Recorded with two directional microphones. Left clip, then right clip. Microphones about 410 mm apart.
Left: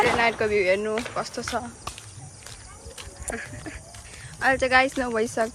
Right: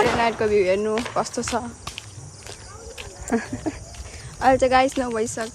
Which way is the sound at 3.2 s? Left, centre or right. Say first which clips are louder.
Right 8 dB; centre.